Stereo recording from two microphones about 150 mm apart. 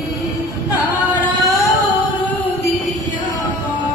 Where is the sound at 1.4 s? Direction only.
20° left (ahead or behind).